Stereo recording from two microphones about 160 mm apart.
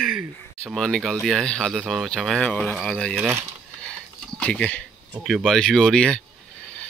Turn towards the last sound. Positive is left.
turn(degrees=5)  # may be behind; listen again after turning